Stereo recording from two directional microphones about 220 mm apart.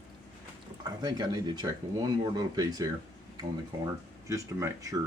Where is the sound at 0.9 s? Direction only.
15° right (ahead or behind).